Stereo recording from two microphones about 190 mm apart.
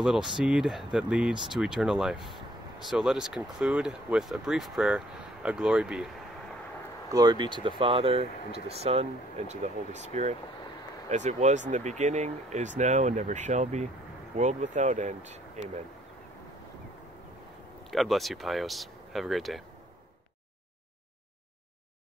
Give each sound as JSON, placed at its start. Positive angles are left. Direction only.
{"t": 0.4, "sound": "speech", "side_deg": -5}
{"t": 7.1, "sound": "speech", "side_deg": -20}
{"t": 17.9, "sound": "speech", "side_deg": 0}